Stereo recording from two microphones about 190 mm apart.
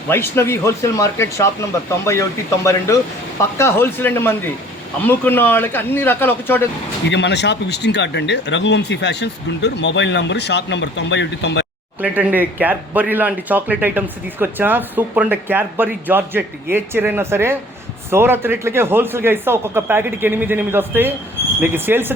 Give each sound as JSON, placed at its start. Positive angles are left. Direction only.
{"t": 0.1, "sound": "speech", "side_deg": 15}
{"t": 2.6, "sound": "speech", "side_deg": 15}
{"t": 7.1, "sound": "speech", "side_deg": 65}
{"t": 11.9, "sound": "speech", "side_deg": -10}